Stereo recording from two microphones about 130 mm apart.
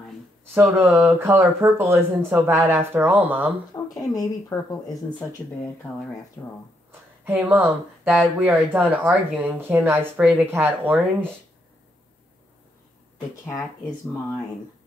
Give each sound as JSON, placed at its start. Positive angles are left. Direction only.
{"t": 0.6, "sound": "speech", "side_deg": -10}
{"t": 3.7, "sound": "a sound", "side_deg": 25}
{"t": 4.1, "sound": "speech", "side_deg": 30}
{"t": 6.4, "sound": "speech", "side_deg": 25}
{"t": 7.2, "sound": "speech", "side_deg": -15}
{"t": 13.6, "sound": "speech", "side_deg": 5}